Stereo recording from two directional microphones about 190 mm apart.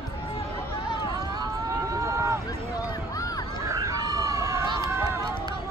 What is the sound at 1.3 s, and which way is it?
Run, 20° right (ahead or behind).